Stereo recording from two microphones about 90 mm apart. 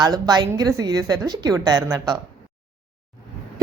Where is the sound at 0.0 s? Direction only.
50° right (ahead or behind).